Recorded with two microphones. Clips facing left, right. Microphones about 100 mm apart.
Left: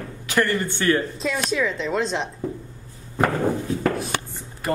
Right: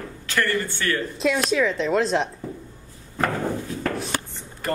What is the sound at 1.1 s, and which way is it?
Speech, centre (ahead or behind).